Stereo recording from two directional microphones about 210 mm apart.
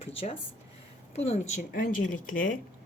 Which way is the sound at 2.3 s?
40° left (ahead or behind).